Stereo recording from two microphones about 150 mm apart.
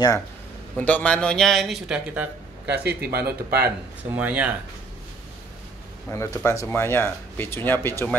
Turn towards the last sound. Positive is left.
turn(degrees=15)  # may be behind; listen again after turning